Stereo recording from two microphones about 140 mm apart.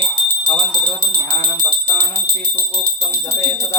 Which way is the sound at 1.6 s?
15° left (ahead or behind).